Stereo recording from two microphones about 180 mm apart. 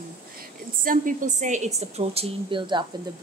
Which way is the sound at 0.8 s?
50° right (ahead or behind).